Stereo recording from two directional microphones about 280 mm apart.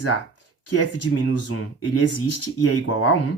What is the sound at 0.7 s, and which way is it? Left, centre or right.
Speech, left.